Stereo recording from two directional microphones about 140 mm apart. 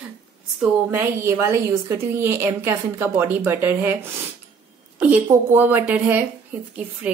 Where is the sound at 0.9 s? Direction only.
20° right (ahead or behind).